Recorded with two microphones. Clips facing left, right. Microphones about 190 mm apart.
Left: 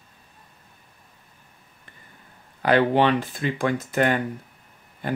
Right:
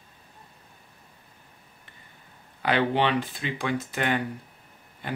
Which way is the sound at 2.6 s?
45° left (ahead or behind).